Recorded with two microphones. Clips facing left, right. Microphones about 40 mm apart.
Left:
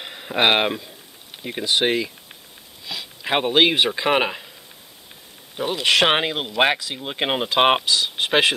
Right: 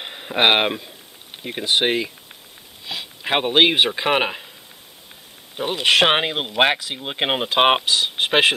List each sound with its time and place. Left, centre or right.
0.0 s speech: centre
5.6 s speech: centre
7.8 s speech: right